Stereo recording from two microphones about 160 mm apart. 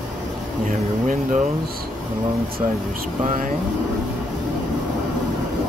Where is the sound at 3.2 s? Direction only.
60° right (ahead or behind).